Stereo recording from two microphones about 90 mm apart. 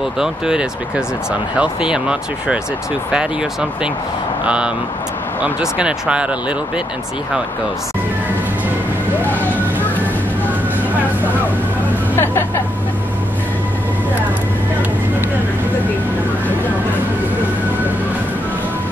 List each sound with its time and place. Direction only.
0.2 s speech: 10° right (ahead or behind)
4.5 s speech: 10° right (ahead or behind)
12.2 s music: 20° left (ahead or behind)